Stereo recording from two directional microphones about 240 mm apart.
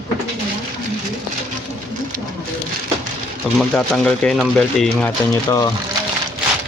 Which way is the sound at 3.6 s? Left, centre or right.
Centre.